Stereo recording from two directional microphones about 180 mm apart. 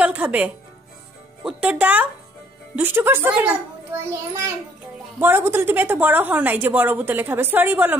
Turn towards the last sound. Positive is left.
turn(degrees=-10)  # may be behind; listen again after turning